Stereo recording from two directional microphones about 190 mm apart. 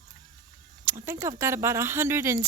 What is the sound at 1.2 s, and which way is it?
Speech, 15° right (ahead or behind).